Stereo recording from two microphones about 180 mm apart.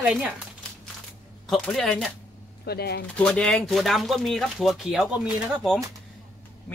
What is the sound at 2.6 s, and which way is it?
Speech, 60° left (ahead or behind).